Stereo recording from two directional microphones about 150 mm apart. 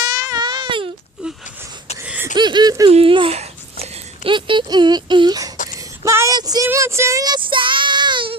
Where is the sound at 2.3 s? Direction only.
30° right (ahead or behind).